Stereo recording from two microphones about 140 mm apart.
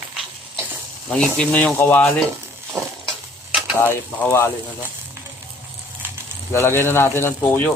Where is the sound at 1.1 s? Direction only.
5° left (ahead or behind).